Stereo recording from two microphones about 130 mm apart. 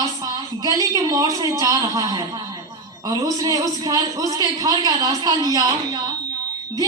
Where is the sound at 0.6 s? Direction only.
30° right (ahead or behind).